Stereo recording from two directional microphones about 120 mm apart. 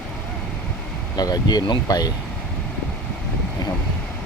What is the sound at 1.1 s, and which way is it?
Speech, 35° left (ahead or behind).